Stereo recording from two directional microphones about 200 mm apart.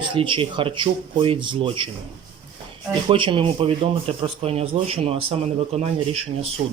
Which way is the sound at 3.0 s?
25° right (ahead or behind).